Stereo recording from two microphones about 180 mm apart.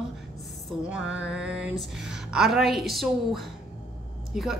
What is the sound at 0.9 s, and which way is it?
Music, 90° right.